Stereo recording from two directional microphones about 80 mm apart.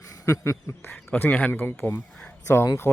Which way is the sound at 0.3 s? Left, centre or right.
Left.